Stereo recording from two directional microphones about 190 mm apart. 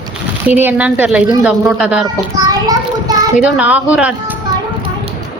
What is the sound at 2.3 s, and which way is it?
Child singing, 20° right (ahead or behind).